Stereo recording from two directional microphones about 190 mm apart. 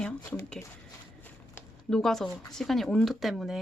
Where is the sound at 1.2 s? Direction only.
10° left (ahead or behind).